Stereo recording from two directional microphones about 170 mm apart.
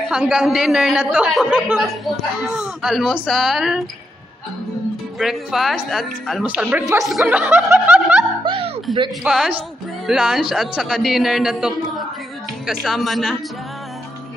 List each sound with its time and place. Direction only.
0.1 s speech: 5° right (ahead or behind)
5.2 s speech: centre (ahead or behind)
6.5 s snicker: 10° right (ahead or behind)
8.5 s a sound: 35° right (ahead or behind)
9.2 s speech: 5° right (ahead or behind)